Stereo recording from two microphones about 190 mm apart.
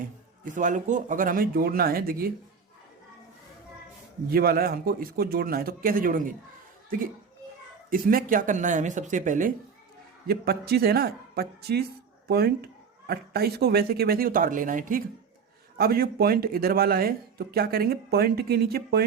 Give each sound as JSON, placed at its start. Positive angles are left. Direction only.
{"t": 0.4, "sound": "speech", "side_deg": -40}
{"t": 4.3, "sound": "speech", "side_deg": -50}
{"t": 7.9, "sound": "speech", "side_deg": -50}
{"t": 10.2, "sound": "a woman's voice", "side_deg": -55}